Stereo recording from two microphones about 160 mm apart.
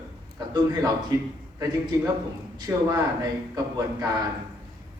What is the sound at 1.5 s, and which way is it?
Speech, 20° right (ahead or behind).